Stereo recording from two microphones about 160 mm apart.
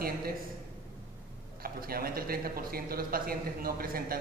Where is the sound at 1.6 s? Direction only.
70° right (ahead or behind).